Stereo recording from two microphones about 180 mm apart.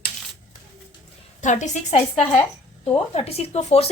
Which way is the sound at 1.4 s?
40° left (ahead or behind).